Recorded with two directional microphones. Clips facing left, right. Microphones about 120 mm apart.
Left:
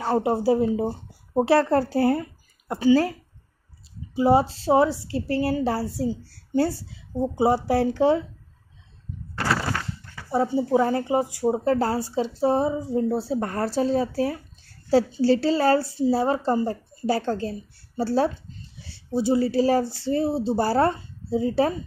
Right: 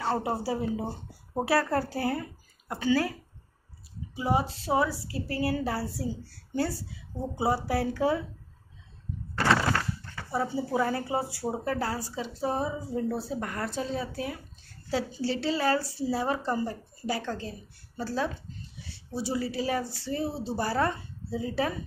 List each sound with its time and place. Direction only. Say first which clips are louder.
0.1 s a woman's voice: left 10 dB; 25° left (ahead or behind)
4.1 s a woman's voice: left 9 dB; 35° left (ahead or behind)
10.3 s a woman's voice: left 7 dB; 25° left (ahead or behind)
11.6 s speech: left 8 dB; 30° left (ahead or behind)